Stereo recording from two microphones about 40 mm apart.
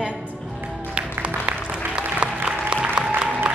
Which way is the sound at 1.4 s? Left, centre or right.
Right.